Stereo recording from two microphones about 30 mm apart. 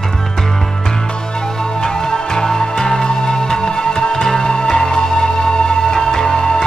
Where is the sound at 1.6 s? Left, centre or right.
Centre.